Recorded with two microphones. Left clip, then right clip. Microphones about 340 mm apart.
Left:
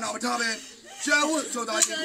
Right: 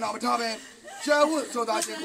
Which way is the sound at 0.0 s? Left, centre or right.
Centre.